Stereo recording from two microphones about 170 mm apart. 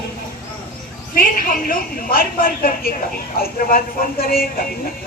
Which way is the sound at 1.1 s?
55° left (ahead or behind).